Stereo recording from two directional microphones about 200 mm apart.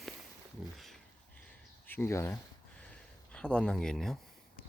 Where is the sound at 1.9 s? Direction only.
10° left (ahead or behind).